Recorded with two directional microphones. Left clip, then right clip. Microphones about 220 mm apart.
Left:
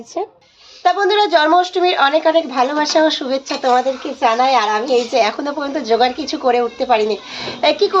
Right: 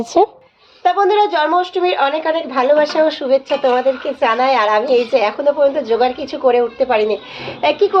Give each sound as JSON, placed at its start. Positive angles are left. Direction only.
{"t": 0.1, "sound": "speech", "side_deg": -45}
{"t": 0.9, "sound": "a woman's voice", "side_deg": 5}